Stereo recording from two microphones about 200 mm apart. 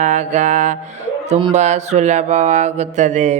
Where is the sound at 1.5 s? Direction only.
35° right (ahead or behind).